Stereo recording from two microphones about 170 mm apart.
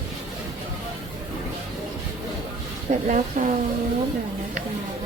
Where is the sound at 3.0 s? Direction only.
45° right (ahead or behind).